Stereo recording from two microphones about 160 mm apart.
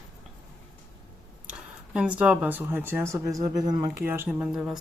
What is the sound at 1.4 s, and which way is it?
Speech, 5° right (ahead or behind).